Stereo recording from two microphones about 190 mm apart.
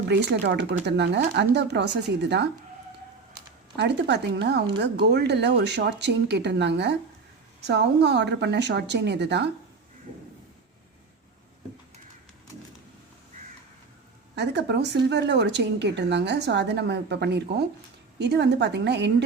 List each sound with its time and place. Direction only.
0.1 s speech: 65° right (ahead or behind)
3.8 s speech: 65° right (ahead or behind)
14.3 s speech: 65° right (ahead or behind)